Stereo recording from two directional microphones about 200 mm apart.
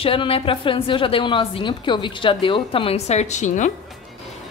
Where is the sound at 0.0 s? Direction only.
30° left (ahead or behind).